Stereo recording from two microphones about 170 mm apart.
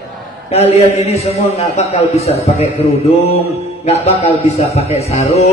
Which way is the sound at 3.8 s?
35° left (ahead or behind).